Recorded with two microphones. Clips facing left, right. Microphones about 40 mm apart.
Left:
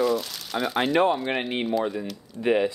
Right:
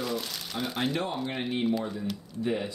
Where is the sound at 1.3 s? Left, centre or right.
Left.